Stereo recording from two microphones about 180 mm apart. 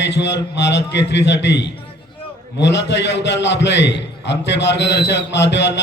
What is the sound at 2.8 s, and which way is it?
Speech, 75° left (ahead or behind).